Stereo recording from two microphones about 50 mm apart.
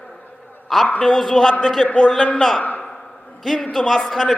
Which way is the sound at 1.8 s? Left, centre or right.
Left.